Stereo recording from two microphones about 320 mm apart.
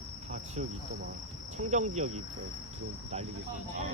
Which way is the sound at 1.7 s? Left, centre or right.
Right.